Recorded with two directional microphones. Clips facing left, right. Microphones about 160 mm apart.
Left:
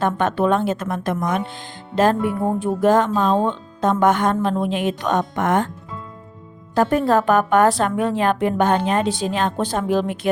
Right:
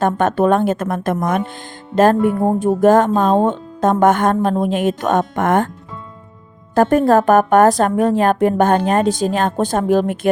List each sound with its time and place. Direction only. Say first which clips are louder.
0.0 s a woman's voice: right 4 dB; 45° right (ahead or behind)
6.7 s a woman's voice: right 5 dB; 45° right (ahead or behind)